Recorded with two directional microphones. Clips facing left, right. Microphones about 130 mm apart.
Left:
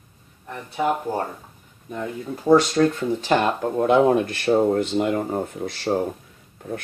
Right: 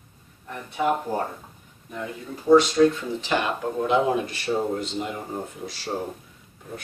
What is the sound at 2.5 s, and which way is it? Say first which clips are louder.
Speech: right 1 dB; 45° left (ahead or behind).